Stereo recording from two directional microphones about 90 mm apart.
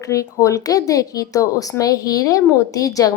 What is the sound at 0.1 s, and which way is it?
A woman's voice, 40° left (ahead or behind).